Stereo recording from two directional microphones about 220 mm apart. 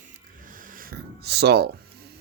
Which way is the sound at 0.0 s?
40° right (ahead or behind).